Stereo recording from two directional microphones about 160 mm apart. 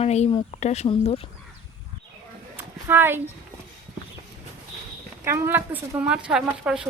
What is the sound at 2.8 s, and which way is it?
Speech, 15° right (ahead or behind).